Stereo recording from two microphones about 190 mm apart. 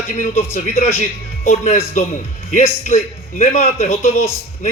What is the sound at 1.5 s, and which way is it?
A man's voice, 35° left (ahead or behind).